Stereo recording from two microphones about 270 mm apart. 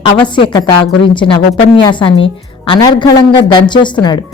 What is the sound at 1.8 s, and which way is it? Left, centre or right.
A woman's voice, centre.